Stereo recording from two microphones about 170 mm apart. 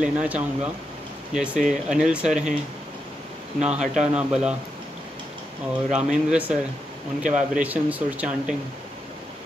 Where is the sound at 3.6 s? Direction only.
5° right (ahead or behind).